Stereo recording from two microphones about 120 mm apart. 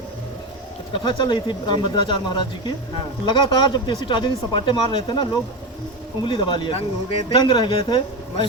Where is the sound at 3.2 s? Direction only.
40° left (ahead or behind).